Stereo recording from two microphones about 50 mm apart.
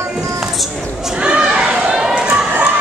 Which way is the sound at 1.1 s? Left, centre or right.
Right.